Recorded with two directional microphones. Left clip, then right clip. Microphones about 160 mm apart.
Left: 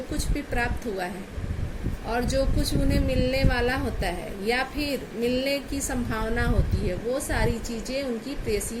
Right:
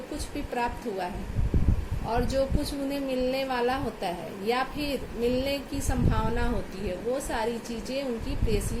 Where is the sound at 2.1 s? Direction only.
50° left (ahead or behind).